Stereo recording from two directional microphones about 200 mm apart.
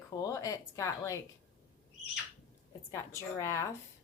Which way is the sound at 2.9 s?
15° left (ahead or behind).